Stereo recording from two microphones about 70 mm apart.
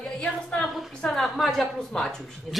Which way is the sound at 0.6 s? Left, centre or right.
Centre.